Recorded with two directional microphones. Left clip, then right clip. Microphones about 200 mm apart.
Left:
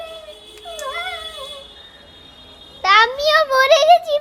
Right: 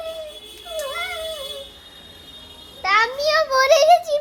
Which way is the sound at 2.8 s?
20° left (ahead or behind).